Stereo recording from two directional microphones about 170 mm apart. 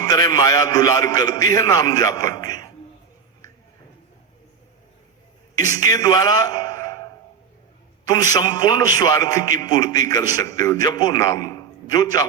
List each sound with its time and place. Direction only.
0.0 s a man's voice: 25° left (ahead or behind)
5.5 s a man's voice: 20° left (ahead or behind)